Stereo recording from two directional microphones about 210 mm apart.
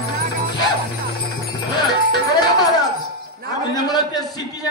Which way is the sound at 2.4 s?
20° left (ahead or behind).